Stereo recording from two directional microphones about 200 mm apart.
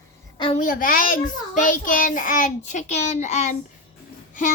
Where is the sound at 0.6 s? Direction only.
45° left (ahead or behind).